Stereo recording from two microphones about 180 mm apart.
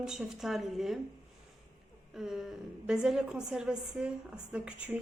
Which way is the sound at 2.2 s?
5° right (ahead or behind).